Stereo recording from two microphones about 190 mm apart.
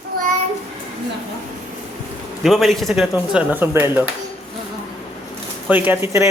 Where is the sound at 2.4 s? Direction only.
Centre (ahead or behind).